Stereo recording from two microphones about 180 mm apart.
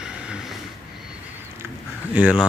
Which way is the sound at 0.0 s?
5° right (ahead or behind).